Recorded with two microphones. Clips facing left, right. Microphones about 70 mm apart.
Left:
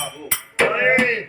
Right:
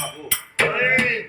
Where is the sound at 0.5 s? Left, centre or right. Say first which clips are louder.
Left 3 dB; centre.